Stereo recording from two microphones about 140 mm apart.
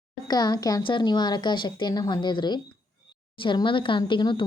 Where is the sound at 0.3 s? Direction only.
30° left (ahead or behind).